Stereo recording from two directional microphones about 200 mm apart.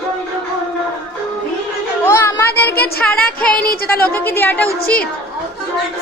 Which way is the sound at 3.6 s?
50° left (ahead or behind).